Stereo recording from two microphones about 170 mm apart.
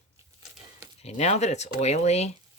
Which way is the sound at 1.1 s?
40° left (ahead or behind).